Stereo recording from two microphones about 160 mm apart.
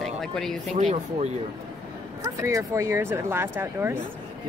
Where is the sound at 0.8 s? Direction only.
45° right (ahead or behind).